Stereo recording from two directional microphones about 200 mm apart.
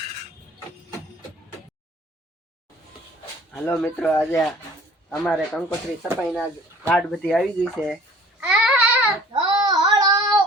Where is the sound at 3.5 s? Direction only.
Centre (ahead or behind).